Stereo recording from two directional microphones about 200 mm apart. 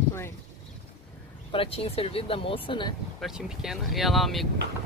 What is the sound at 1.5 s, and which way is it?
Speech, 25° left (ahead or behind).